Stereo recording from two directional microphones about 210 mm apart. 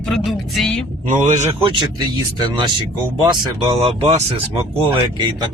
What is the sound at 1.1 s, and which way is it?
Speech, 30° right (ahead or behind).